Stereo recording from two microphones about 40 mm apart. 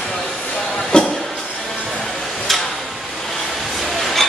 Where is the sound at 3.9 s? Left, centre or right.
Centre.